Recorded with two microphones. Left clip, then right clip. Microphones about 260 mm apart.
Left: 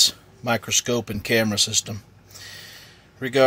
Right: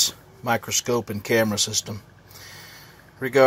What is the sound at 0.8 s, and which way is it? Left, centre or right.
Speech, centre.